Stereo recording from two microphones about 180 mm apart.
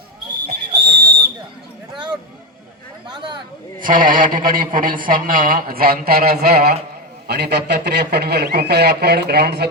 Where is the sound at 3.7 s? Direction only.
50° right (ahead or behind).